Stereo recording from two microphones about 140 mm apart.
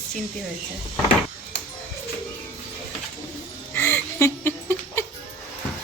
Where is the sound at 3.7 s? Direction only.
15° left (ahead or behind).